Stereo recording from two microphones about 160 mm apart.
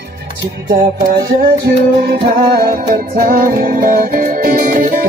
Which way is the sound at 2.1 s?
70° right (ahead or behind).